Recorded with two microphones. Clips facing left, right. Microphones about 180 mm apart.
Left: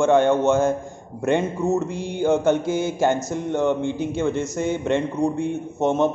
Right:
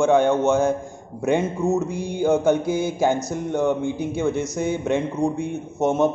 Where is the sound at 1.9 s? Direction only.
15° right (ahead or behind).